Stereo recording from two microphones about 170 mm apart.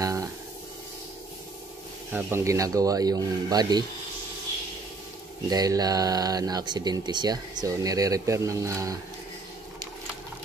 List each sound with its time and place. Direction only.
0.0 s a sound: 20° right (ahead or behind)
2.1 s speech: 15° right (ahead or behind)
5.5 s speech: 20° right (ahead or behind)